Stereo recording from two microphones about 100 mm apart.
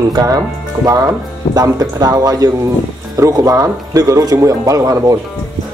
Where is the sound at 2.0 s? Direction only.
40° right (ahead or behind).